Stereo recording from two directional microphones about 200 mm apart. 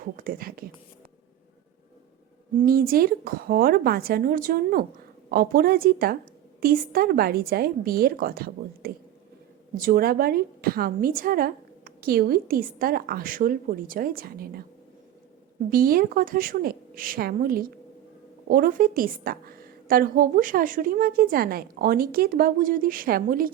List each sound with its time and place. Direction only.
0.0 s a woman's voice: 45° right (ahead or behind)
2.6 s a woman's voice: 45° right (ahead or behind)
15.7 s a woman's voice: 45° right (ahead or behind)